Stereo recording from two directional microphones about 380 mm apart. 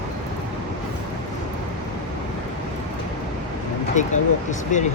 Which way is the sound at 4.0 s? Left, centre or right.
Centre.